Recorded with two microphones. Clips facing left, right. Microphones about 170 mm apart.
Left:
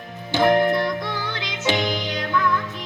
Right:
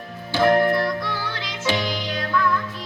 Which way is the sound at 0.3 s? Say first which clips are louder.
Even; 20° left (ahead or behind).